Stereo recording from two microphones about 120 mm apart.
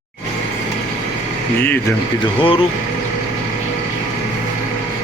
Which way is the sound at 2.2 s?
45° left (ahead or behind).